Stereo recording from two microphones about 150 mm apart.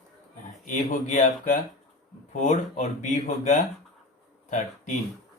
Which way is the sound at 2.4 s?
55° left (ahead or behind).